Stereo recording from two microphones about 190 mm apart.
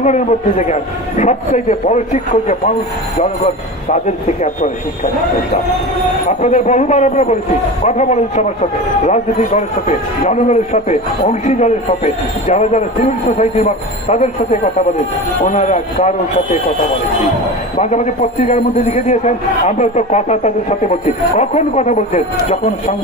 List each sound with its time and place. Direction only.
0.0 s a man's voice: 40° left (ahead or behind)
6.2 s a man's voice: 40° left (ahead or behind)
17.7 s a man's voice: 35° left (ahead or behind)